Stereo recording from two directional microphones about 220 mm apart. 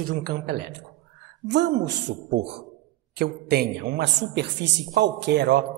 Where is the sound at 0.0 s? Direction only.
40° right (ahead or behind).